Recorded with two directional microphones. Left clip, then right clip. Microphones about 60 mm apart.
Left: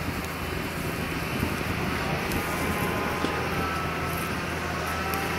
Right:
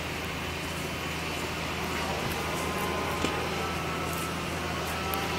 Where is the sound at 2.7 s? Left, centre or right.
Right.